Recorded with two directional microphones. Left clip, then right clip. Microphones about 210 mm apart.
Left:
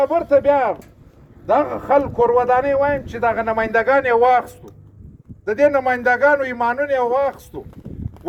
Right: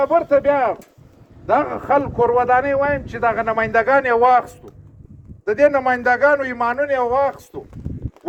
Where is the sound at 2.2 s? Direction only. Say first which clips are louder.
Right 2 dB; 25° right (ahead or behind).